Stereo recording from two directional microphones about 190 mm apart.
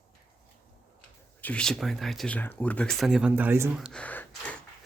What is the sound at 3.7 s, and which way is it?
Gasp, centre (ahead or behind).